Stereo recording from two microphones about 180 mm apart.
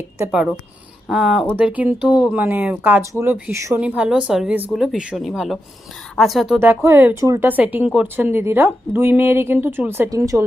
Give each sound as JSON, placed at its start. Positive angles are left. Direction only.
{"t": 1.0, "sound": "speech", "side_deg": 0}
{"t": 6.6, "sound": "speech", "side_deg": -15}